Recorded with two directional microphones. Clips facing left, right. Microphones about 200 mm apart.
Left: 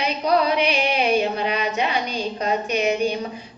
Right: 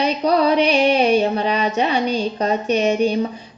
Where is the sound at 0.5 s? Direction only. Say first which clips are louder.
Right 6 dB; 35° right (ahead or behind).